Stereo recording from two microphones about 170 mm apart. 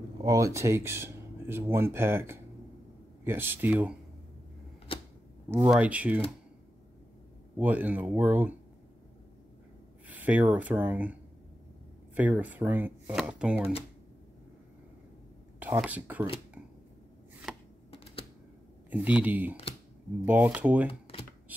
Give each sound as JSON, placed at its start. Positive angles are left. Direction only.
{"t": 0.2, "sound": "speech", "side_deg": -20}
{"t": 4.9, "sound": "typewriter", "side_deg": 30}
{"t": 5.7, "sound": "speech", "side_deg": -10}
{"t": 7.5, "sound": "speech", "side_deg": -10}
{"t": 10.0, "sound": "speech", "side_deg": -10}
{"t": 12.2, "sound": "speech", "side_deg": -10}
{"t": 15.6, "sound": "speech", "side_deg": -10}
{"t": 18.9, "sound": "speech", "side_deg": -10}
{"t": 21.5, "sound": "hands", "side_deg": -10}